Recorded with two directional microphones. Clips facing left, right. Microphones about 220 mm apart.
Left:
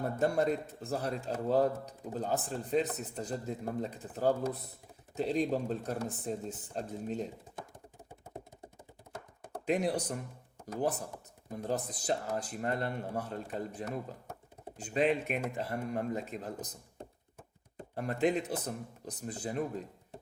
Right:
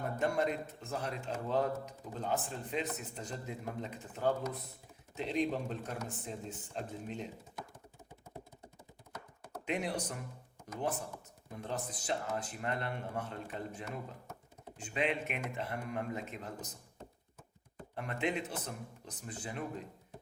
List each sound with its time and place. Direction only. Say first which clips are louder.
0.2 s a man's voice: left 3 dB; 40° left (ahead or behind)
9.5 s a man's voice: left 6 dB; 35° left (ahead or behind)
17.9 s a man's voice: left 6 dB; 40° left (ahead or behind)